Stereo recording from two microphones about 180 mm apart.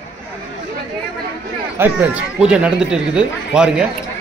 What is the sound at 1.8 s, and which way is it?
Speech, 10° right (ahead or behind).